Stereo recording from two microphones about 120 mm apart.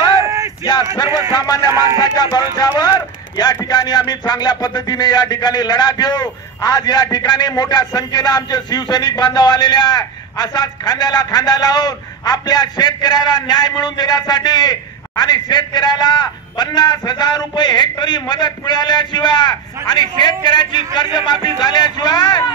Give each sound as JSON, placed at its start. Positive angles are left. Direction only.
{"t": 0.2, "sound": "a sound", "side_deg": -25}
{"t": 1.3, "sound": "music", "side_deg": 35}
{"t": 1.7, "sound": "speech", "side_deg": -25}
{"t": 2.0, "sound": "music", "side_deg": 35}